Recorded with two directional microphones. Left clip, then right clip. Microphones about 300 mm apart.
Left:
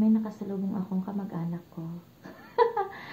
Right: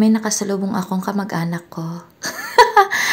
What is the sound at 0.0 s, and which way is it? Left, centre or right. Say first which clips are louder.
Speech: right 11 dB; right.